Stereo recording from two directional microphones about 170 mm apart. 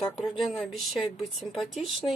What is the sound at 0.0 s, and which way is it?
Speech, centre (ahead or behind).